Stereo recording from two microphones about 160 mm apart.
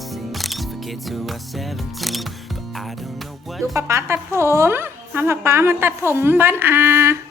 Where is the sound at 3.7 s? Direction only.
15° right (ahead or behind).